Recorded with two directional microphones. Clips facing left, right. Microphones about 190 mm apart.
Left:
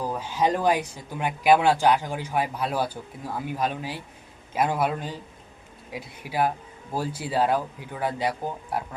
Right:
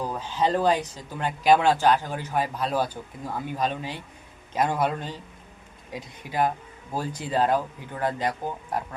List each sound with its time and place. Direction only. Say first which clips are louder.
0.1 s speech: left 1 dB; 10° left (ahead or behind)